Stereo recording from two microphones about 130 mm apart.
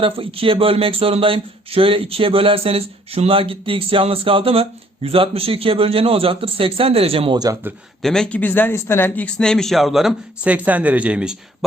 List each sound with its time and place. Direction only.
0.0 s speech: 45° right (ahead or behind)
8.0 s speech: 5° left (ahead or behind)